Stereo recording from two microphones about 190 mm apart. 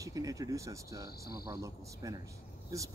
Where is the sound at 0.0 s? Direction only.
20° right (ahead or behind).